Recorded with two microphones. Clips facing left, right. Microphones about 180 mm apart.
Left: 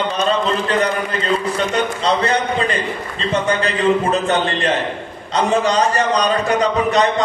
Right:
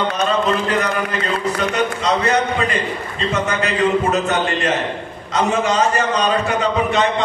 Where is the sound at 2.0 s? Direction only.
30° left (ahead or behind).